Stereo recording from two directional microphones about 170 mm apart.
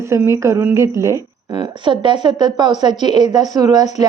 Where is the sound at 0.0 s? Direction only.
15° right (ahead or behind).